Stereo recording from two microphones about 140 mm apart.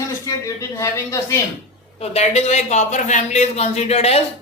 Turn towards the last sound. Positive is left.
turn(degrees=50)  # may be behind; listen again after turning